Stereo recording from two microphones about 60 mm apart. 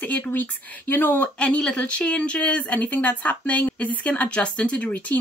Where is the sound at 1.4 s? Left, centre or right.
Centre.